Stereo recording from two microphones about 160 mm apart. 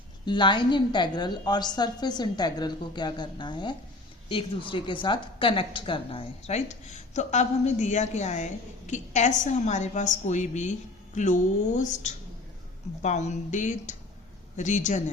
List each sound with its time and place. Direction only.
0.3 s a woman's voice: 30° left (ahead or behind); by 15.0 s 50° left (ahead or behind)